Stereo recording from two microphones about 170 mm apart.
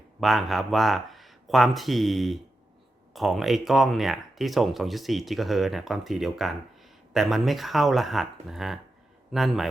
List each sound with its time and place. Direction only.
0.2 s speech: centre (ahead or behind)